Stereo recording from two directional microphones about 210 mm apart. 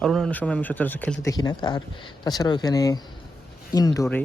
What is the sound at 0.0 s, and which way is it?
Speech, centre (ahead or behind).